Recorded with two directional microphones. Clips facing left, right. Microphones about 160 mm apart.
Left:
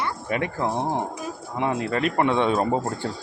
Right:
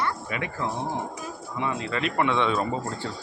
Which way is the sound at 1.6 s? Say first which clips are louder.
Left 4 dB; 55° left (ahead or behind).